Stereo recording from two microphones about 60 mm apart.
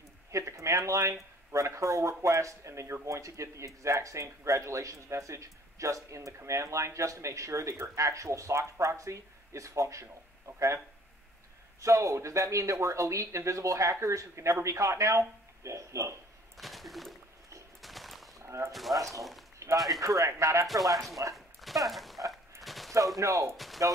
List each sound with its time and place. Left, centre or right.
0.3 s a sound: right
1.5 s speech: right
11.8 s speech: right
16.5 s bird: centre
18.4 s a sound: right
18.7 s speech: centre
19.6 s a sound: right
20.0 s speech: right
21.5 s dog: centre
22.6 s fusillade: centre
22.9 s speech: right
23.5 s speech: centre